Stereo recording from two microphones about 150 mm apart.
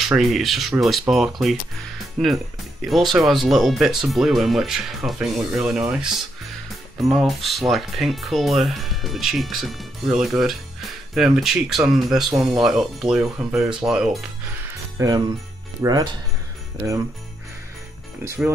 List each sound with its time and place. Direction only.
0.0 s speech: centre (ahead or behind)
7.1 s speech: centre (ahead or behind)
15.0 s jingle bell: 25° right (ahead or behind)
18.2 s speech: 15° right (ahead or behind)